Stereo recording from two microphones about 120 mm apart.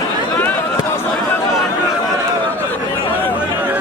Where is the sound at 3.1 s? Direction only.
15° left (ahead or behind).